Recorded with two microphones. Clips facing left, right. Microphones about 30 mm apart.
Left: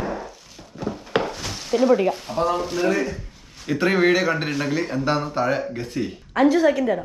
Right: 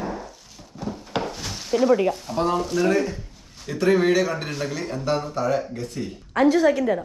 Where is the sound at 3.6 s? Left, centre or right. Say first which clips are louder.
Left 1 dB; left.